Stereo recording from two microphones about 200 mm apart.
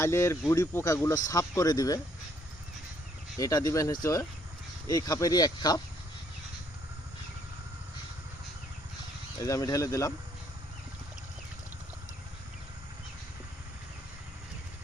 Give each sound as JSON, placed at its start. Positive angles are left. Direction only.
{"t": 0.0, "sound": "speech", "side_deg": 15}
{"t": 3.3, "sound": "speech", "side_deg": 20}
{"t": 9.4, "sound": "speech", "side_deg": 15}